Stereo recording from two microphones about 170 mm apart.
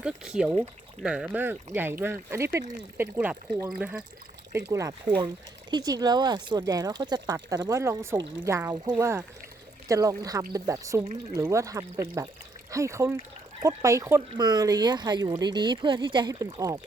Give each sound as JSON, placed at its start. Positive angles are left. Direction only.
{"t": 0.0, "sound": "speech", "side_deg": -5}